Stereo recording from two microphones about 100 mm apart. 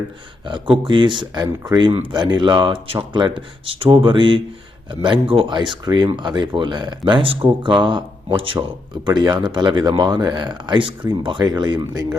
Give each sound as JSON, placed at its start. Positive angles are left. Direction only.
{"t": 0.4, "sound": "speech", "side_deg": -55}
{"t": 9.0, "sound": "speech", "side_deg": -45}